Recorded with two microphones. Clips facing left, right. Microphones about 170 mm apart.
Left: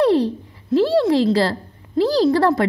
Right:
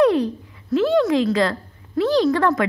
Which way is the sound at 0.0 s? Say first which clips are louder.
Left 1 dB; 30° left (ahead or behind).